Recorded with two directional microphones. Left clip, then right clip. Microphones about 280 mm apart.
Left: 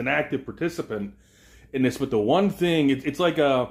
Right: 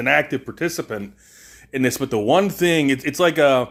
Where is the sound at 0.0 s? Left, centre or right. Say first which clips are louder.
Right 6 dB; right.